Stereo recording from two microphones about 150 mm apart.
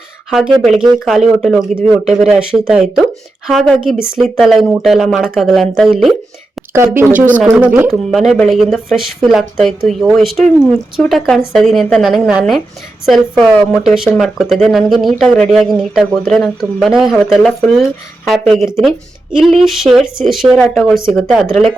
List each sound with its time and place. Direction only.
0.3 s speech: 5° right (ahead or behind)
6.7 s speech: 20° right (ahead or behind); by 21.4 s centre (ahead or behind)